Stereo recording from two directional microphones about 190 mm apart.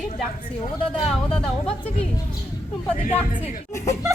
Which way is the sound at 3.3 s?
45° left (ahead or behind).